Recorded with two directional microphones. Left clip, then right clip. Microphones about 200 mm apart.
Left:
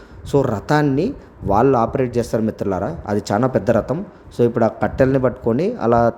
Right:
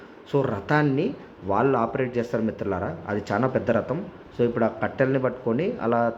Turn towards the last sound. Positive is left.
turn(degrees=55)  # may be behind; listen again after turning